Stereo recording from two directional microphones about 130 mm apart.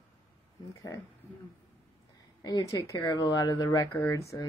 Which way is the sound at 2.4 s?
25° left (ahead or behind).